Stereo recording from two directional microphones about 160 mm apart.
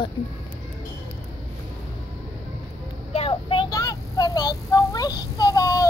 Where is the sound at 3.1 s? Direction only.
35° left (ahead or behind).